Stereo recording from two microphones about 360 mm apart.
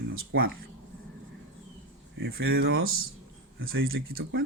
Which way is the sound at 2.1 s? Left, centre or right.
Right.